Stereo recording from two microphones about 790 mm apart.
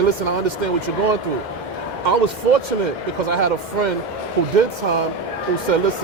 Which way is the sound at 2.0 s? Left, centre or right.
Right.